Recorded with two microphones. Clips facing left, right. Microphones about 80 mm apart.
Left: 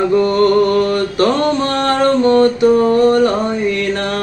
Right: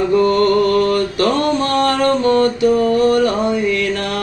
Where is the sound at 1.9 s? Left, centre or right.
Left.